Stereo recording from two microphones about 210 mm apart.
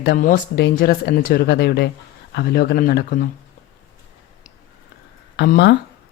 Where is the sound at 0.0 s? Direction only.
45° left (ahead or behind).